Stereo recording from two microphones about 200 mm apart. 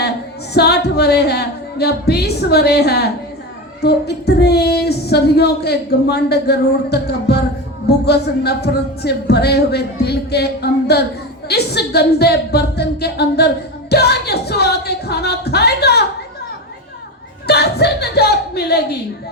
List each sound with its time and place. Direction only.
0.5 s speech: 55° left (ahead or behind)
17.4 s speech: 55° left (ahead or behind)